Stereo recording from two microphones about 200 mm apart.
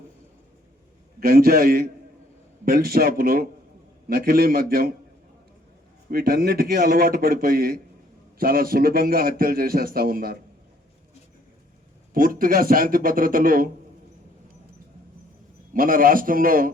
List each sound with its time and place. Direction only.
1.2 s a man's voice: 50° right (ahead or behind)
6.1 s a man's voice: 50° right (ahead or behind)
12.1 s a man's voice: 45° right (ahead or behind)
15.7 s a man's voice: 45° right (ahead or behind)